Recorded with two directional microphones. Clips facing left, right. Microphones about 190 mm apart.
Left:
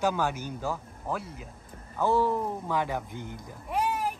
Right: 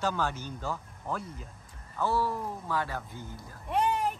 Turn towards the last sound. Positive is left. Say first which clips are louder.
# right 1 dB
turn(degrees=5)  # may be behind; listen again after turning